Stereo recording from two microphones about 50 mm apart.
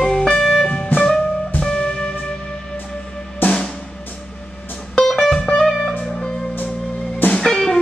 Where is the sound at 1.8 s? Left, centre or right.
Left.